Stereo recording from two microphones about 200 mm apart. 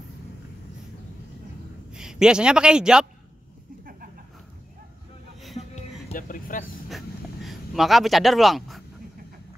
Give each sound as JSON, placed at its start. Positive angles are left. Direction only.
{"t": 1.9, "sound": "speech", "side_deg": -5}
{"t": 5.6, "sound": "music", "side_deg": 35}
{"t": 7.4, "sound": "speech", "side_deg": 0}